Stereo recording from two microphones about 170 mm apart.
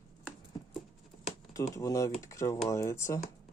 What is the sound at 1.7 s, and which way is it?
Speech, 20° left (ahead or behind).